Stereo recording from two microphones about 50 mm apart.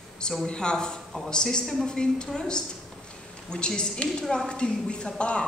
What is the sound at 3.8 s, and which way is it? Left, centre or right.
A woman's voice, centre.